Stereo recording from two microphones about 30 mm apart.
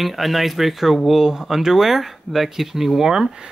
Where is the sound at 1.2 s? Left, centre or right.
Centre.